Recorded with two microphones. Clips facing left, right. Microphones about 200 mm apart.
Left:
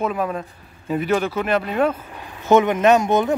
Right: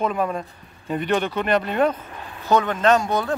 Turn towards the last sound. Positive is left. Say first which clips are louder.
# left 3 dB
turn(degrees=20)  # may be behind; listen again after turning